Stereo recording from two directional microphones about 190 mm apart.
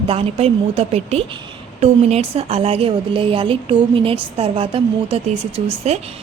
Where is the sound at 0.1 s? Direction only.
30° right (ahead or behind).